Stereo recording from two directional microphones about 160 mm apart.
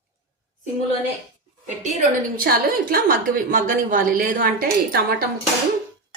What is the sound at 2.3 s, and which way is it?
A woman's voice, 65° right (ahead or behind).